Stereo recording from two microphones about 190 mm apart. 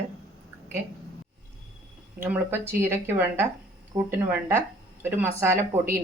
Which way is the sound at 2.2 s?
10° right (ahead or behind).